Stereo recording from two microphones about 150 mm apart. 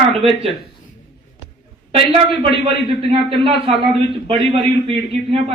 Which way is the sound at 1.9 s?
40° right (ahead or behind).